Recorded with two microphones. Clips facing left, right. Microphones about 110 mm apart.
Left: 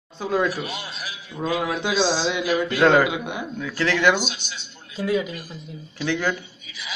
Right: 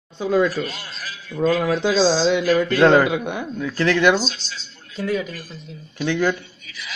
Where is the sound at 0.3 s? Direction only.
15° left (ahead or behind).